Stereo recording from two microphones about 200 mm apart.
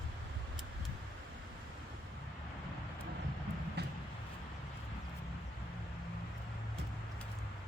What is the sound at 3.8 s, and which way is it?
Vehicle, 55° right (ahead or behind).